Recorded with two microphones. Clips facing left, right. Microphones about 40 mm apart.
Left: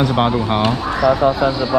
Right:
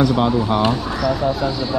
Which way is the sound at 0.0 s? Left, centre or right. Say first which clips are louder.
Even; left.